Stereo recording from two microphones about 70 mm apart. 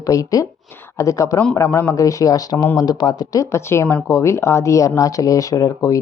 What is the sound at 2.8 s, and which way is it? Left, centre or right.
Speech, left.